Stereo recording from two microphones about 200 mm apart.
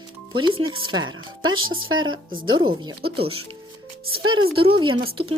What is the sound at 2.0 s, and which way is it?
Speech, 25° right (ahead or behind).